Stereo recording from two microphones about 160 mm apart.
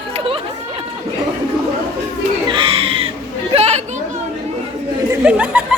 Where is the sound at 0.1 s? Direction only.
35° right (ahead or behind).